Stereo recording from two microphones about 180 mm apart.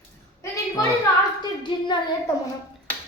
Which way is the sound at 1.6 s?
25° left (ahead or behind).